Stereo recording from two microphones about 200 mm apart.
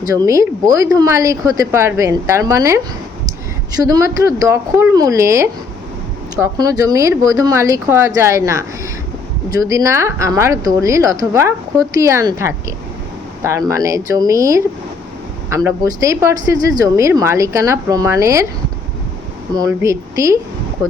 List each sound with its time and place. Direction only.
0.1 s a woman's voice: 15° right (ahead or behind)
19.5 s a woman's voice: 15° right (ahead or behind)